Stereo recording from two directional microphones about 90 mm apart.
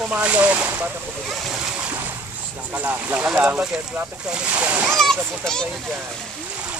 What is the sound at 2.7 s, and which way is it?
Speech, 15° right (ahead or behind).